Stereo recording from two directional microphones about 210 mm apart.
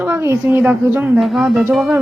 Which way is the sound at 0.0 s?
10° right (ahead or behind).